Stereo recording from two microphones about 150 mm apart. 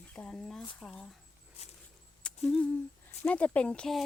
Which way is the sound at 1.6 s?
45° left (ahead or behind).